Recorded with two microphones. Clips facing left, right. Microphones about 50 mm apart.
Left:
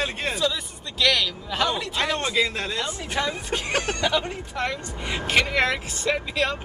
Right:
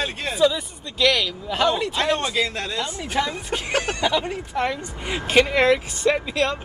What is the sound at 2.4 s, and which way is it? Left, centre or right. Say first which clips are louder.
Speech: even; centre.